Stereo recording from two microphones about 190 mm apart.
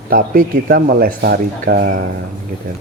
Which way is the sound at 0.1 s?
50° right (ahead or behind).